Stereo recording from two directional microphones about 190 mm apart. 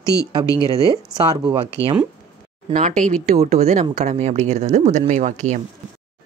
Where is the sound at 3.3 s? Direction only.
35° right (ahead or behind).